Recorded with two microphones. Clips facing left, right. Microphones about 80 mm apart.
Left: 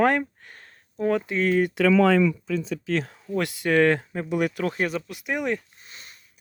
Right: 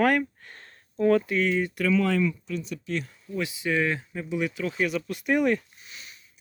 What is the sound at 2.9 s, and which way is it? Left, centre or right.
Speech, left.